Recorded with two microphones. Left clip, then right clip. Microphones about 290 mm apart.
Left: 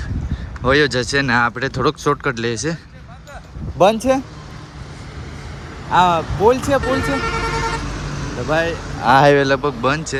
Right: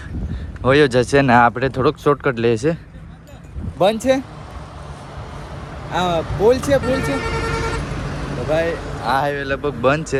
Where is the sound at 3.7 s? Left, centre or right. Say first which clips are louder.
Left 2 dB; centre.